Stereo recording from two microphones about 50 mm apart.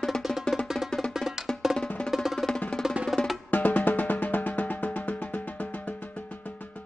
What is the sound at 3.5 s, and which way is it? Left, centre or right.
Music, left.